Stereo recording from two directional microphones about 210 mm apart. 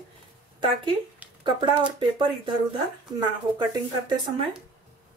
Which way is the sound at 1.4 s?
20° right (ahead or behind).